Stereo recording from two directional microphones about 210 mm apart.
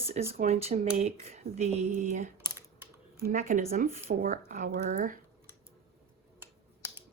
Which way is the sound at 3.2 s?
40° right (ahead or behind).